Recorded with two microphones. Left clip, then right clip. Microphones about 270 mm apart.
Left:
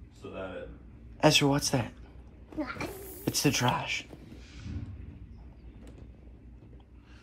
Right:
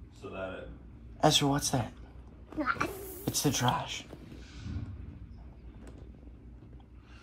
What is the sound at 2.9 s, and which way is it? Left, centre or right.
Speech, right.